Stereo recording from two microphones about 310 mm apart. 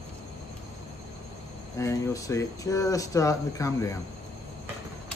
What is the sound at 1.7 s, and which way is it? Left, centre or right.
Speech, centre.